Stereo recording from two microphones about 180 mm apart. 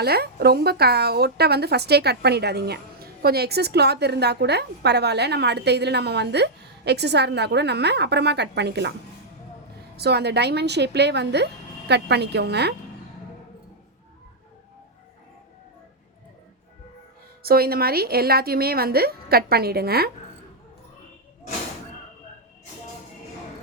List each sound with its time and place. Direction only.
0.0 s a woman's voice: 60° right (ahead or behind)
10.0 s a woman's voice: 65° right (ahead or behind)
17.4 s a woman's voice: 60° right (ahead or behind)